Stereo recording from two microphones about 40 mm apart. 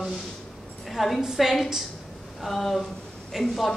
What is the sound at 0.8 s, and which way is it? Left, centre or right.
A woman's voice, centre.